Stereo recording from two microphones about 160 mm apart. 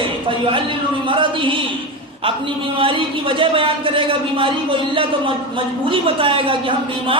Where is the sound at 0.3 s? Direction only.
35° right (ahead or behind).